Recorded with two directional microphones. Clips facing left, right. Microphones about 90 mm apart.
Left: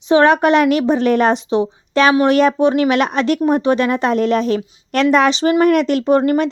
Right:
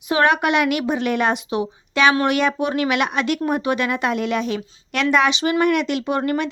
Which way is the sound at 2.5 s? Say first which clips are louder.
Left 7 dB; 30° left (ahead or behind).